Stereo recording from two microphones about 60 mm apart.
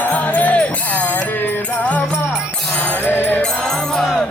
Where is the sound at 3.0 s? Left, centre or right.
Left.